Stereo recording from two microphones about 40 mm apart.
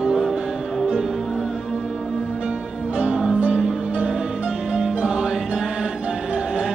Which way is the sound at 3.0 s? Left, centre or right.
Right.